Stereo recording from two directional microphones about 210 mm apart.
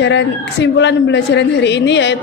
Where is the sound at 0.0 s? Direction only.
60° left (ahead or behind).